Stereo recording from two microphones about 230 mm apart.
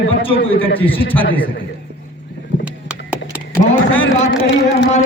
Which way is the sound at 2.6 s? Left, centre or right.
Centre.